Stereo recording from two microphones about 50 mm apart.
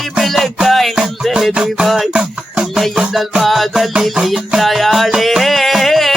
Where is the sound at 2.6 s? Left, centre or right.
Centre.